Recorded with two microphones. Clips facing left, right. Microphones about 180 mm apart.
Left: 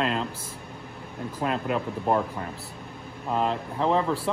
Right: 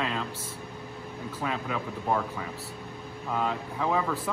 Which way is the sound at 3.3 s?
30° left (ahead or behind).